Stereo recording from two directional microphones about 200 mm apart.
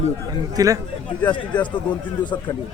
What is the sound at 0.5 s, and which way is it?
Speech, 15° right (ahead or behind).